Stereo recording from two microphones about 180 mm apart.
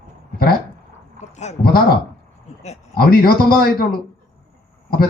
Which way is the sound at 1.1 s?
40° left (ahead or behind).